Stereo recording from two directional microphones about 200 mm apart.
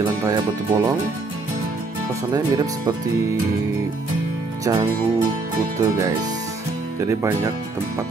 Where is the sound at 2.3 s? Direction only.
20° right (ahead or behind).